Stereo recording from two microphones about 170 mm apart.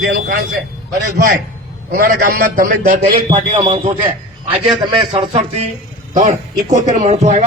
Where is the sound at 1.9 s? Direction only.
55° right (ahead or behind).